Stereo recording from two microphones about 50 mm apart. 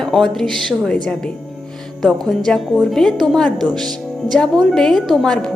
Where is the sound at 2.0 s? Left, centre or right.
Centre.